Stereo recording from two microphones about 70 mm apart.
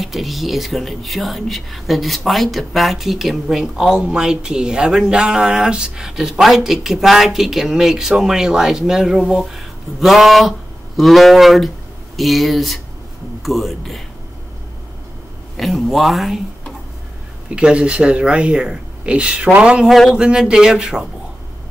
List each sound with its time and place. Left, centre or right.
0.0 s speech: centre
15.5 s speech: centre
17.6 s speech: centre
19.9 s speech: centre
20.2 s speech: centre